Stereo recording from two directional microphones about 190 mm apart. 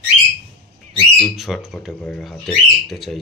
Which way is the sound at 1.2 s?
Centre (ahead or behind).